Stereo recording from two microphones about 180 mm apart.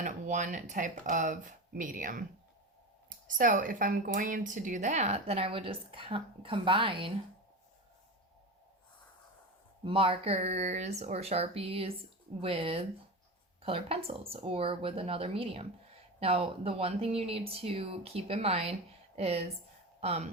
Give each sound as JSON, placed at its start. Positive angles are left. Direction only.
{"t": 0.0, "sound": "speech", "side_deg": -45}
{"t": 3.2, "sound": "speech", "side_deg": -45}
{"t": 9.8, "sound": "speech", "side_deg": -30}